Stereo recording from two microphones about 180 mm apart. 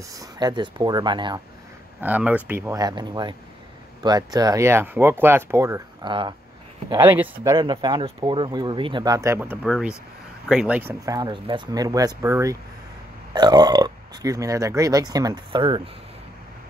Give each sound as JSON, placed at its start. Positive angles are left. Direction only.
{"t": 0.1, "sound": "speech", "side_deg": -20}
{"t": 2.0, "sound": "speech", "side_deg": -10}
{"t": 7.4, "sound": "speech", "side_deg": -25}